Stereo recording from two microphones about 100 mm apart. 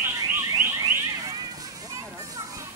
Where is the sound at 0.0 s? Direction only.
25° right (ahead or behind).